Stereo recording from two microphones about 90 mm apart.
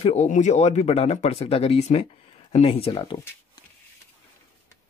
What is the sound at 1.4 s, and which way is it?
Speech, 90° left.